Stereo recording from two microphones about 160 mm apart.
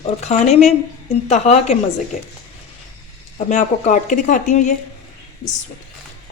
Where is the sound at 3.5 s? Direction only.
50° left (ahead or behind).